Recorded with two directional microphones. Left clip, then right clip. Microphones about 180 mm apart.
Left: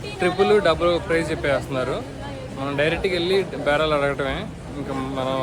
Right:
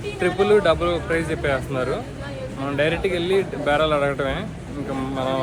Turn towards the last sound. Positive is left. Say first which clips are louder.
# right 1 dB
turn(degrees=20)  # may be behind; listen again after turning